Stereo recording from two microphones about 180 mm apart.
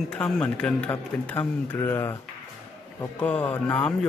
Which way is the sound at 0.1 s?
5° left (ahead or behind).